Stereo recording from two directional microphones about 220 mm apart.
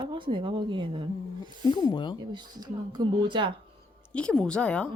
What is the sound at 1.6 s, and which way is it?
Speech, 20° left (ahead or behind).